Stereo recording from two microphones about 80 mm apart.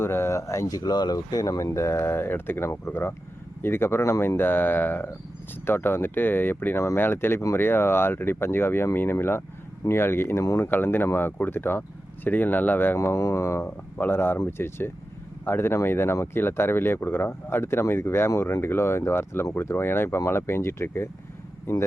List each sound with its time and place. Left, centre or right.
0.0 s speech: left
0.9 s speech: left
10.6 s speech: left
13.0 s speech: left